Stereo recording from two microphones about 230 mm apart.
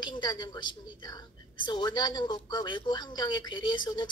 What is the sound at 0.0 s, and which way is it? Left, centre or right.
A woman's voice, centre.